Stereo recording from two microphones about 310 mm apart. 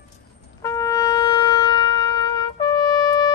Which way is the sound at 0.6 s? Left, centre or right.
Centre.